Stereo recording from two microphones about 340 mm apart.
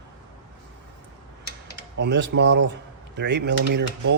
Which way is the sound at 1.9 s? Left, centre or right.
Right.